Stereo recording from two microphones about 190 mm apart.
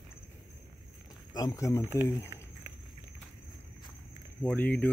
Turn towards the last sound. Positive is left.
turn(degrees=10)  # may be behind; listen again after turning